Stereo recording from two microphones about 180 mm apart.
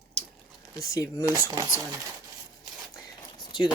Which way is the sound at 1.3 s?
20° right (ahead or behind).